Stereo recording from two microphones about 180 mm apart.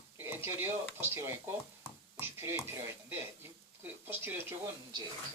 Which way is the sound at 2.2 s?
15° right (ahead or behind).